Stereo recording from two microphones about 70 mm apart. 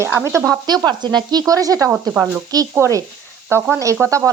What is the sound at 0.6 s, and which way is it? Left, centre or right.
Speech, right.